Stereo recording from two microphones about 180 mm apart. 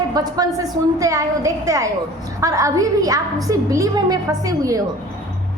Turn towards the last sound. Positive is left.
turn(degrees=-20)  # may be behind; listen again after turning